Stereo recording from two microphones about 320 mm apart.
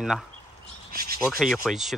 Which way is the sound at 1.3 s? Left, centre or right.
Centre.